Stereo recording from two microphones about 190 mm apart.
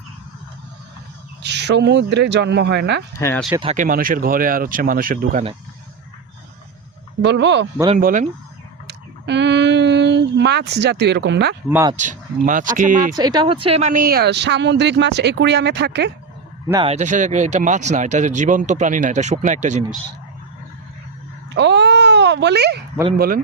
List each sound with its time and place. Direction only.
1.4 s speech: 65° right (ahead or behind)
3.2 s speech: 15° left (ahead or behind)
3.6 s speech: 30° right (ahead or behind)
3.8 s speech: 45° right (ahead or behind)
7.2 s speech: 65° right (ahead or behind)
7.9 s speech: 45° right (ahead or behind)
8.9 s speech: 65° right (ahead or behind)
11.9 s speech: 40° right (ahead or behind)
13.1 s speech: 20° right (ahead or behind); by 16.1 s 65° right (ahead or behind)
16.8 s speech: 35° right (ahead or behind)
21.5 s a sound: 65° right (ahead or behind)
23.1 s speech: 50° right (ahead or behind)